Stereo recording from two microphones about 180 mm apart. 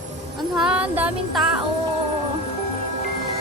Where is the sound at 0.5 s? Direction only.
5° right (ahead or behind).